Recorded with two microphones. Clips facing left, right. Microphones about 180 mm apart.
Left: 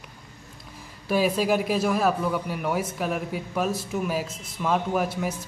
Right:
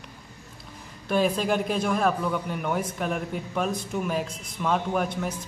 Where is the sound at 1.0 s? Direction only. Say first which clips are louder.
Left 1 dB; 5° left (ahead or behind).